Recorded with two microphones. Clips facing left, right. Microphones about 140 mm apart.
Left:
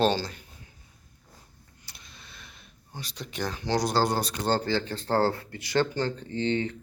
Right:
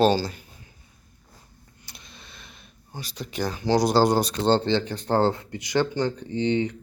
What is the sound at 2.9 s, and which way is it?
Speech, 5° right (ahead or behind).